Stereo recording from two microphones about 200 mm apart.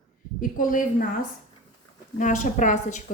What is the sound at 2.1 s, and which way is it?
Speech, 40° left (ahead or behind).